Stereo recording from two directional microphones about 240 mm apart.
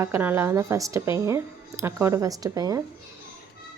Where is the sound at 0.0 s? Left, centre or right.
Centre.